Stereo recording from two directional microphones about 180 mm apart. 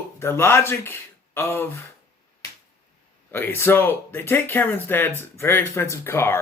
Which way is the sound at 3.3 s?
15° left (ahead or behind).